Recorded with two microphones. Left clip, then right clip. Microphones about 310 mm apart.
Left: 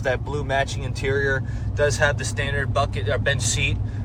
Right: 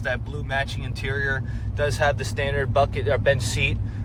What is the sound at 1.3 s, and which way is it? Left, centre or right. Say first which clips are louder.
Speech: left 3 dB; centre.